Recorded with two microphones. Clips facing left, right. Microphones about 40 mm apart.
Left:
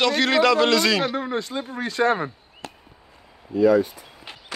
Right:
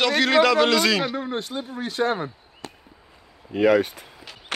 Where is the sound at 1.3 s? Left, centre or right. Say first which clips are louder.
Left 2 dB; left.